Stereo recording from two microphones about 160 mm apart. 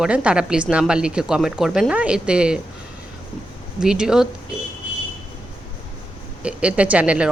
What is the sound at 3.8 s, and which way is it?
Speech, 5° right (ahead or behind).